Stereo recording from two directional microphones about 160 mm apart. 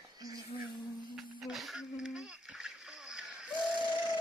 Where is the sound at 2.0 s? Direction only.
5° right (ahead or behind).